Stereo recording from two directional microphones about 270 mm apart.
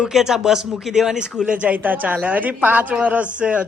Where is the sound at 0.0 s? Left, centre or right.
Centre.